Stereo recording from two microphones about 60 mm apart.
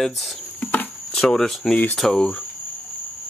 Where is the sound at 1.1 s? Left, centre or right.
Centre.